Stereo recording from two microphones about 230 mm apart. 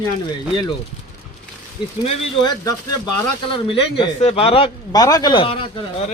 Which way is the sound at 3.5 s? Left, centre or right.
Left.